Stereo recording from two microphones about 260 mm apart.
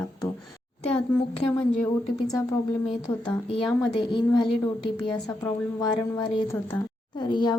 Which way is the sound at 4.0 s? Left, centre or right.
Centre.